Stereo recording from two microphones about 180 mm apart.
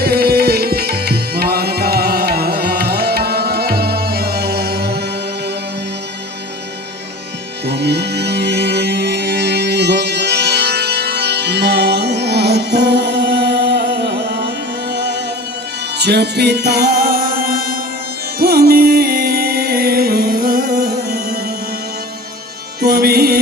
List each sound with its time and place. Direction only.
0.0 s tabla: 60° right (ahead or behind)
7.7 s music: 65° right (ahead or behind)
22.8 s music: 60° right (ahead or behind)